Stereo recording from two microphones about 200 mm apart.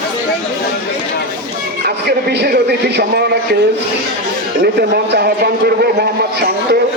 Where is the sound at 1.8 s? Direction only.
55° right (ahead or behind).